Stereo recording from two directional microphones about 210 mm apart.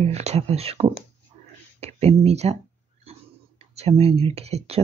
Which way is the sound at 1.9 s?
30° right (ahead or behind).